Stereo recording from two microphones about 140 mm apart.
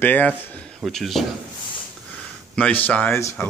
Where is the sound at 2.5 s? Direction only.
10° left (ahead or behind).